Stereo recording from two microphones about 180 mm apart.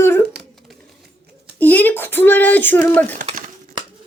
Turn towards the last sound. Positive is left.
turn(degrees=10)  # may be behind; listen again after turning